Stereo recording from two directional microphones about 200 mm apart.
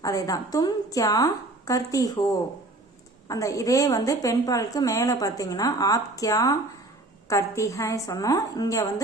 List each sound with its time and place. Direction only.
0.0 s a woman's voice: 15° left (ahead or behind)
3.2 s a woman's voice: 15° left (ahead or behind)